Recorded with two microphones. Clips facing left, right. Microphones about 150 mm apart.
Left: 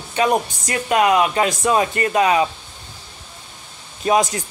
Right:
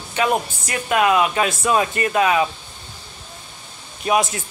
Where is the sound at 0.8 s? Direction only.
20° left (ahead or behind).